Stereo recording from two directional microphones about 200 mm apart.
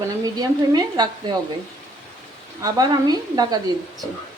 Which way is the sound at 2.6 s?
20° right (ahead or behind).